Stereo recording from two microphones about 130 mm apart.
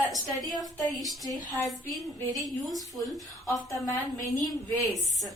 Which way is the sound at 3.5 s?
25° left (ahead or behind).